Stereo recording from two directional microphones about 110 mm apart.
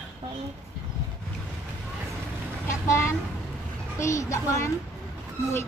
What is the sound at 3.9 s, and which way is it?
Speech, 25° left (ahead or behind).